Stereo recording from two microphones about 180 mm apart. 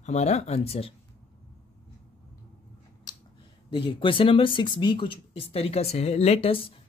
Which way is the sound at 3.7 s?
30° left (ahead or behind).